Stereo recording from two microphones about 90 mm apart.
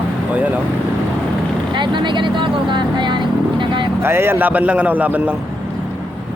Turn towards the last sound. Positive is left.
turn(degrees=-15)  # may be behind; listen again after turning